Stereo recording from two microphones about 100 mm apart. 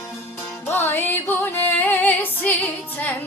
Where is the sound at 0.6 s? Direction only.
20° left (ahead or behind).